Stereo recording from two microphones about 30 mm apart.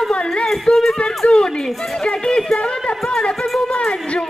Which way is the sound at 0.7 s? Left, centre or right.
Left.